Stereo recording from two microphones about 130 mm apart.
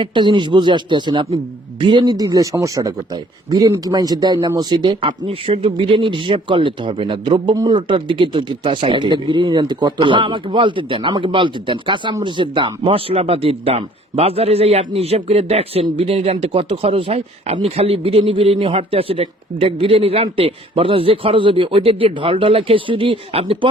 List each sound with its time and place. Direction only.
0.0 s a man's voice: 40° right (ahead or behind)